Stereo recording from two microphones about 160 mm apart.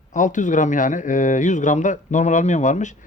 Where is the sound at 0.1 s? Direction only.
50° left (ahead or behind).